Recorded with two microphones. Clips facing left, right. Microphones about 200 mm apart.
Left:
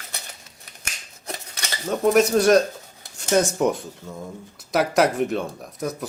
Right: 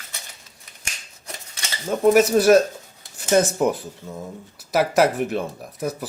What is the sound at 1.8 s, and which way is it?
Speech, 5° right (ahead or behind).